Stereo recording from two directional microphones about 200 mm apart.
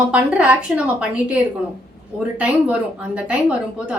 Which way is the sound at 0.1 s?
5° right (ahead or behind).